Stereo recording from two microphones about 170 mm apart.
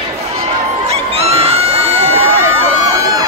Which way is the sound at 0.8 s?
35° right (ahead or behind).